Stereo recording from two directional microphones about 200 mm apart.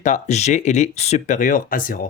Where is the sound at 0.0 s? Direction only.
35° left (ahead or behind).